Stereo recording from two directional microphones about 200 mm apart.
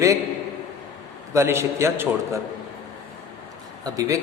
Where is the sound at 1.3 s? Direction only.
15° right (ahead or behind).